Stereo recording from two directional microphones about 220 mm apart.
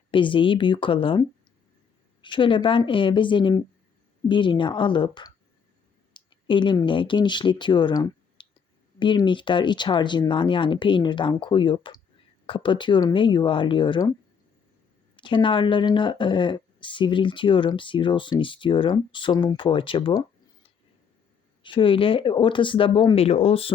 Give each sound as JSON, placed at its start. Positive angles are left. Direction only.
{"t": 0.1, "sound": "speech", "side_deg": 20}
{"t": 15.1, "sound": "speech", "side_deg": 20}